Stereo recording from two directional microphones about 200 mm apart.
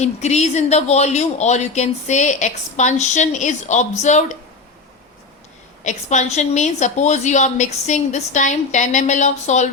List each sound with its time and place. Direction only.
0.0 s speech: 35° left (ahead or behind)
5.8 s speech: 35° left (ahead or behind)